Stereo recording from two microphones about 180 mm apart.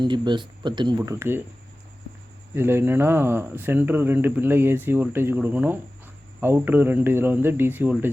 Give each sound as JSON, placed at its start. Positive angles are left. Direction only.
{"t": 0.0, "sound": "speech", "side_deg": -25}
{"t": 2.6, "sound": "speech", "side_deg": -10}